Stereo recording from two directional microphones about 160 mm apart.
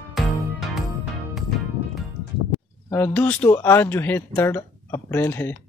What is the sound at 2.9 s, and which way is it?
A man's voice, 10° left (ahead or behind).